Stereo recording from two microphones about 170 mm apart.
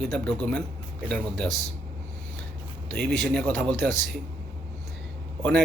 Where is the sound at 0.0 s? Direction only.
5° left (ahead or behind).